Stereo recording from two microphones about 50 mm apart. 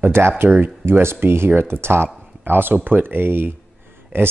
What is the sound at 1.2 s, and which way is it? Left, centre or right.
Speech, right.